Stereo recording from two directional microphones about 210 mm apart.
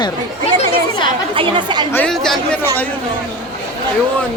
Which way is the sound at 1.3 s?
25° right (ahead or behind).